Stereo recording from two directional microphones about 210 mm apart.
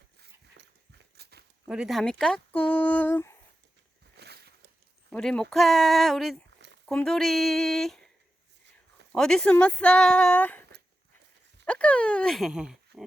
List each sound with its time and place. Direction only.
0.2 s dog: 55° right (ahead or behind)
1.1 s walk: 50° right (ahead or behind)
1.6 s speech: 5° right (ahead or behind)
4.2 s a sound: 50° right (ahead or behind)
5.1 s speech: 5° left (ahead or behind)
9.1 s speech: centre (ahead or behind)